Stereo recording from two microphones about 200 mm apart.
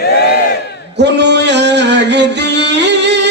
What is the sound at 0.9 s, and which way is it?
Music, 60° right (ahead or behind).